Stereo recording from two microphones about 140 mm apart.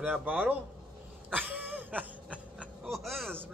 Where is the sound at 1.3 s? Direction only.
10° right (ahead or behind).